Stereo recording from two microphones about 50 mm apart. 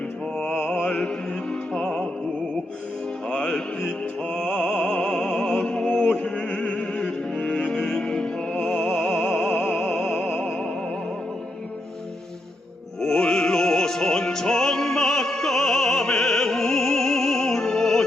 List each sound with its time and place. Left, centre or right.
0.3 s music: centre
3.2 s music: centre
13.0 s music: centre